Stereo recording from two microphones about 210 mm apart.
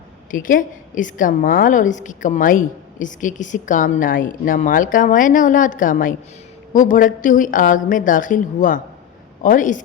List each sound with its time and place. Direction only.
0.3 s a woman's voice: 40° left (ahead or behind)